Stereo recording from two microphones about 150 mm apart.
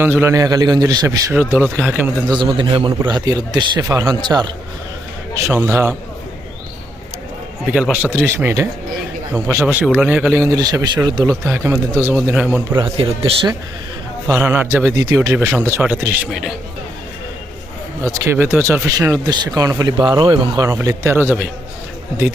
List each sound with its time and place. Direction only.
0.0 s a man's voice: 15° right (ahead or behind)
2.2 s a man's voice: 30° right (ahead or behind)
5.4 s a man's voice: 15° right (ahead or behind)
7.7 s a man's voice: 5° right (ahead or behind)
12.7 s a man's voice: 40° right (ahead or behind)
14.3 s a man's voice: 15° right (ahead or behind)
16.3 s a man's voice: centre (ahead or behind)
18.0 s speech: 20° right (ahead or behind)
20.7 s a man's voice: 20° right (ahead or behind)